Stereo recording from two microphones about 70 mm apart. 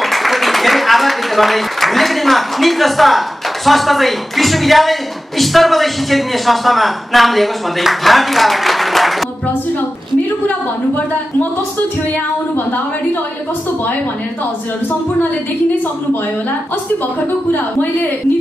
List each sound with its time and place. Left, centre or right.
0.0 s a man's voice: centre
17.5 s a woman's voice: left